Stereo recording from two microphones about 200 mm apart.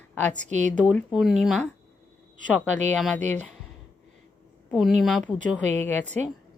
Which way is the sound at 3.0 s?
Centre (ahead or behind).